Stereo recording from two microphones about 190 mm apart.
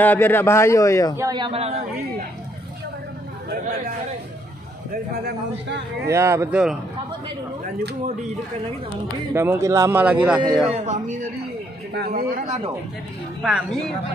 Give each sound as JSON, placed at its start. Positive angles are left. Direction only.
{"t": 0.0, "sound": "a man's voice", "side_deg": 10}
{"t": 1.1, "sound": "a man's voice", "side_deg": -20}
{"t": 6.0, "sound": "speech", "side_deg": -15}
{"t": 9.3, "sound": "speech", "side_deg": -15}
{"t": 10.7, "sound": "speech", "side_deg": -40}
{"t": 11.9, "sound": "speech", "side_deg": -55}
{"t": 13.4, "sound": "a woman's voice", "side_deg": -5}